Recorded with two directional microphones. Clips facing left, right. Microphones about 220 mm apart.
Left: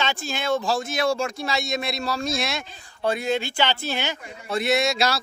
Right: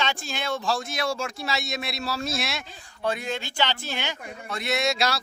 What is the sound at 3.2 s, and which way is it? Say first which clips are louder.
Speech: left 5 dB; 10° left (ahead or behind).